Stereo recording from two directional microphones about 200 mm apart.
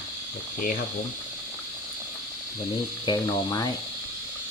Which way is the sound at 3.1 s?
20° left (ahead or behind).